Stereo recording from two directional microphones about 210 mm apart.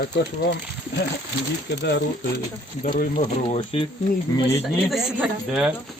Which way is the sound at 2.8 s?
40° left (ahead or behind).